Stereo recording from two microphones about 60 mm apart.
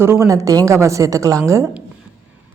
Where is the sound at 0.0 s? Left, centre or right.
Right.